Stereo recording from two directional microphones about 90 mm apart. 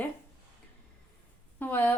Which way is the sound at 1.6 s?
20° left (ahead or behind).